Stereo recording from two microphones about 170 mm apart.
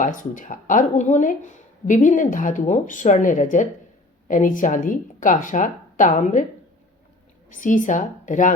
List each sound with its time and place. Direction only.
0.0 s speech: 50° left (ahead or behind)
7.5 s speech: 50° left (ahead or behind)